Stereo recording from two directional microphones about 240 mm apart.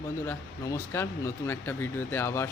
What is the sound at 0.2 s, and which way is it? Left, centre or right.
Speech, centre.